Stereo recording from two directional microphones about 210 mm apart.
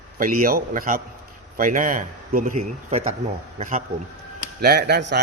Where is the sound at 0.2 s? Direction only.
40° right (ahead or behind).